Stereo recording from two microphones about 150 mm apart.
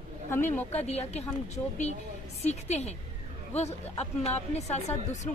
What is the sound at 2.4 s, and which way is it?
Speech, 45° left (ahead or behind).